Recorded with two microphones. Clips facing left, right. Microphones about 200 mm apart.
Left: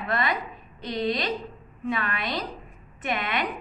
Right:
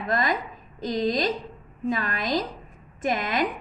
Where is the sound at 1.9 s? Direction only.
40° right (ahead or behind).